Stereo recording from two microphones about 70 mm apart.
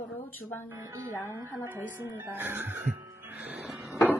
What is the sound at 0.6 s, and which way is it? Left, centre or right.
Speech, right.